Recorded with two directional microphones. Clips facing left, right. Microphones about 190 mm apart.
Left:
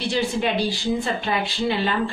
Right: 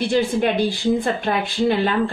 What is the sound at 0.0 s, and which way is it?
Speech, 50° right (ahead or behind).